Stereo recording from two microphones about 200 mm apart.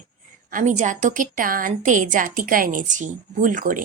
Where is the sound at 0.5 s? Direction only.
40° right (ahead or behind).